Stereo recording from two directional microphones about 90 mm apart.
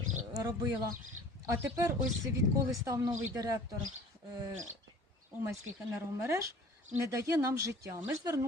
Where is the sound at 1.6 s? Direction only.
35° right (ahead or behind).